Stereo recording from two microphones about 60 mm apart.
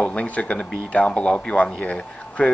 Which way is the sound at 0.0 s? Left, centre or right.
Left.